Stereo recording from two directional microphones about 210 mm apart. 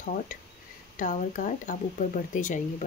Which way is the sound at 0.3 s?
40° left (ahead or behind).